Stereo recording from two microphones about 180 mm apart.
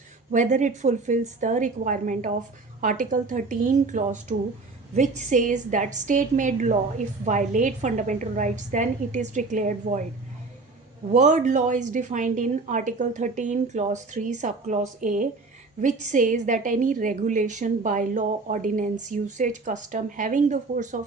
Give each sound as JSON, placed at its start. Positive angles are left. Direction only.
{"t": 0.3, "sound": "a woman's voice", "side_deg": -45}
{"t": 11.1, "sound": "a woman's voice", "side_deg": -45}